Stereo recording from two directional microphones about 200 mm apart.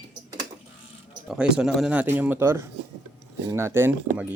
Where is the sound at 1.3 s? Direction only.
5° right (ahead or behind).